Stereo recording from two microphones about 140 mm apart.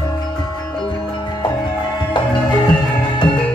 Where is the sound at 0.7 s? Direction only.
35° left (ahead or behind).